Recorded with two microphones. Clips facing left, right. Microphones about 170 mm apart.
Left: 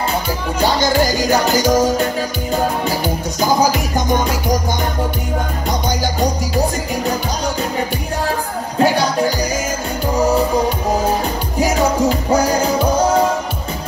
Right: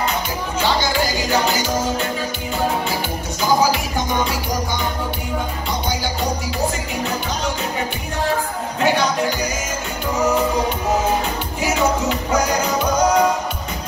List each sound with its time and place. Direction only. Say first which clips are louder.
0.6 s music: left 4 dB; 45° left (ahead or behind)
8.7 s music: left 3 dB; 35° left (ahead or behind)
11.6 s music: left 4 dB; 40° left (ahead or behind)